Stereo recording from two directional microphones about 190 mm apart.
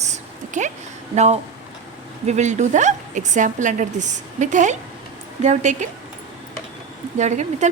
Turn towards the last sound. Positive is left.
turn(degrees=-40)  # may be behind; listen again after turning